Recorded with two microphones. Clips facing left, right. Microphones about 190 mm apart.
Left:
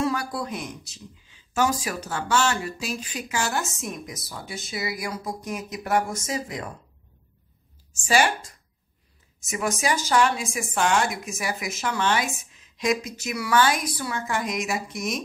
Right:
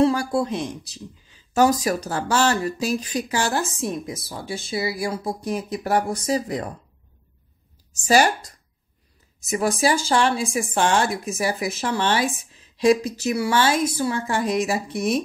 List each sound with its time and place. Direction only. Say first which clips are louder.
0.0 s speech: right 7 dB; 30° right (ahead or behind)
7.9 s speech: right 4 dB; 40° right (ahead or behind)